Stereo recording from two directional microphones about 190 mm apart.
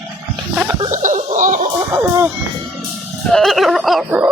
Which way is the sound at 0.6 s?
20° right (ahead or behind).